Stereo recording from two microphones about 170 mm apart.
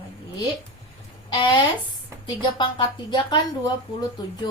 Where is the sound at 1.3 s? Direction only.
25° left (ahead or behind).